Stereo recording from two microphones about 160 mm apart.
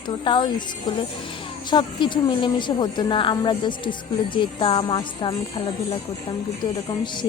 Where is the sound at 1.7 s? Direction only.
30° left (ahead or behind).